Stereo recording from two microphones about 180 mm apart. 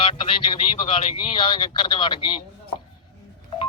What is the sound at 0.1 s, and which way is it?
A man's voice, 30° left (ahead or behind).